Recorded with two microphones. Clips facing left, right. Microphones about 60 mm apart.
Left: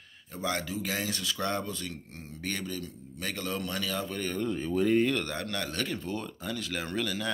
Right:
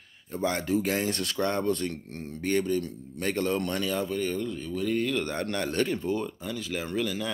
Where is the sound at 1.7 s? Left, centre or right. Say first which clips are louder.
Right 10 dB; right.